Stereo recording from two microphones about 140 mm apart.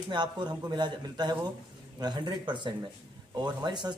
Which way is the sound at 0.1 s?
30° right (ahead or behind).